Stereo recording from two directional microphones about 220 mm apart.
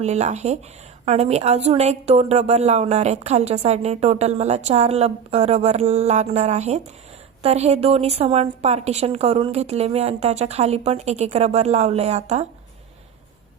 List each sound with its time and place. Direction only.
0.0 s a woman's voice: 30° right (ahead or behind)